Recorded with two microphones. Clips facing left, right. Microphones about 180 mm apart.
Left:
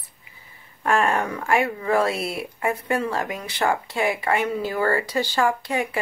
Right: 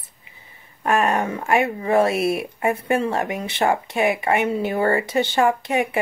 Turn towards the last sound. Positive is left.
turn(degrees=-20)  # may be behind; listen again after turning